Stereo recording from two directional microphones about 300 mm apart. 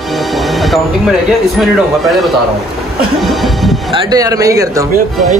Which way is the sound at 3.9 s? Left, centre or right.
Centre.